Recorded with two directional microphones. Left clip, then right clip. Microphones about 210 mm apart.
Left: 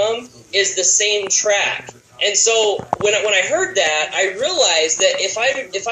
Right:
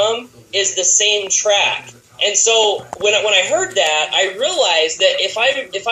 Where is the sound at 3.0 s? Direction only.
5° left (ahead or behind).